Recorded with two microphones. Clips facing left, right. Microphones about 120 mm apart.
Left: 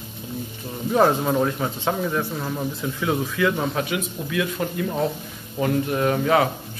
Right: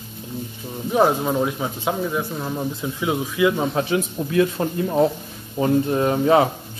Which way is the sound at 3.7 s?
30° right (ahead or behind).